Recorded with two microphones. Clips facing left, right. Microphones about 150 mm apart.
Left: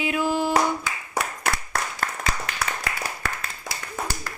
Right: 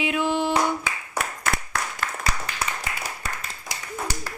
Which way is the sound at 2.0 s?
45° left (ahead or behind).